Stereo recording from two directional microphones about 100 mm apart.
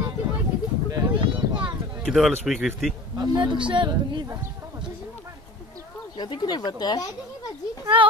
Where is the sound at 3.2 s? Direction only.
50° right (ahead or behind).